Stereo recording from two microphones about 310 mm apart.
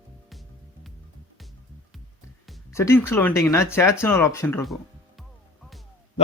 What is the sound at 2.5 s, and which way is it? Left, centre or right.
Speech, centre.